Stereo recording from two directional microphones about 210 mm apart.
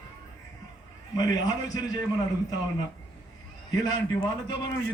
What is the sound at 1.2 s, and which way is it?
Speech, 20° left (ahead or behind).